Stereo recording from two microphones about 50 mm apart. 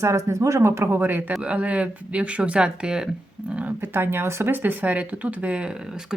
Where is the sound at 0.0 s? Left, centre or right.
Right.